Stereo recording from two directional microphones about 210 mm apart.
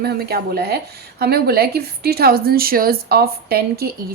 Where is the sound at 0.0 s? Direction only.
45° right (ahead or behind).